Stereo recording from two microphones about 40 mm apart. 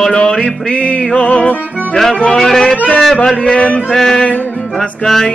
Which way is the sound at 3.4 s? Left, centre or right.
Left.